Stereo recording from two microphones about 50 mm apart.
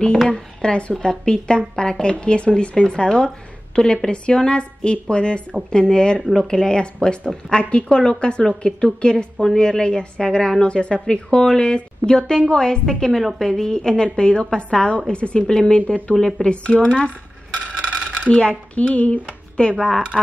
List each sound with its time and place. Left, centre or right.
0.3 s a woman's voice: centre
17.6 s a sound: right
18.3 s speech: left